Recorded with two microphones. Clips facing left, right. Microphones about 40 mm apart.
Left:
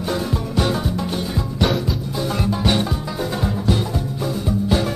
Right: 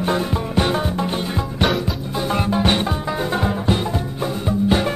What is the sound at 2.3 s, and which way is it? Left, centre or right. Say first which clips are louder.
Music: right 2 dB; right.